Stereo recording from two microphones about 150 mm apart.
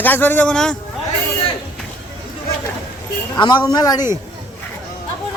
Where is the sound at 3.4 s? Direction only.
30° left (ahead or behind).